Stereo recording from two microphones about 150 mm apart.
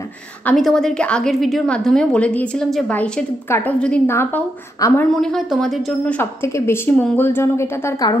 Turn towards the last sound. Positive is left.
turn(degrees=15)  # may be behind; listen again after turning